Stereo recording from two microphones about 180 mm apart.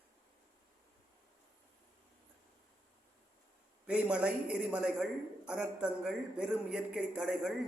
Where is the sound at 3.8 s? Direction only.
5° right (ahead or behind).